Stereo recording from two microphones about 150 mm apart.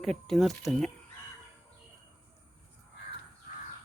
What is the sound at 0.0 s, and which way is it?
Speech, centre (ahead or behind).